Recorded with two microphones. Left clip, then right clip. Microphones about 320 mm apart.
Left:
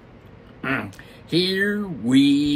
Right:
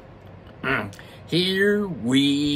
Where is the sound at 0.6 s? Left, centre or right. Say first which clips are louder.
Right 1 dB; centre.